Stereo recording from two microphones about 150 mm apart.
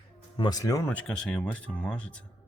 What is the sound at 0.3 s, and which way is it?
Speech, 25° left (ahead or behind).